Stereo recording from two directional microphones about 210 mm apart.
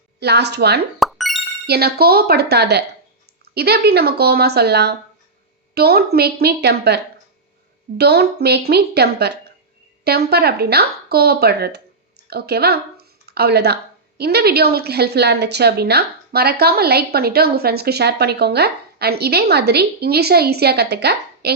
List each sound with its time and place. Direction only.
0.2 s a woman's voice: 50° right (ahead or behind)
0.9 s music: centre (ahead or behind)
1.6 s a woman's voice: 50° right (ahead or behind)